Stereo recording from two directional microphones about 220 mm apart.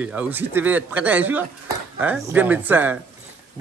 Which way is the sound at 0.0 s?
5° right (ahead or behind).